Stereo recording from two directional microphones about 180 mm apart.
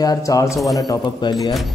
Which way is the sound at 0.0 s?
20° left (ahead or behind).